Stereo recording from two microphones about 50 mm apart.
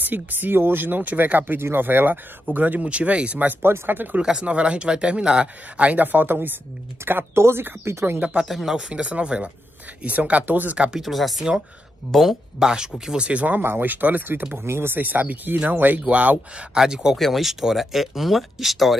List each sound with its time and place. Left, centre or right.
0.0 s speech: right
3.6 s speech: right
4.2 s speech: centre; by 6.6 s right
7.0 s speech: right
8.5 s speech: centre
8.7 s speech: centre; by 10.8 s right
11.0 s speech: centre
13.2 s speech: right
13.6 s speech: right
14.6 s speech: right
15.0 s speech: right
16.1 s speech: right
16.7 s speech: centre
17.2 s speech: centre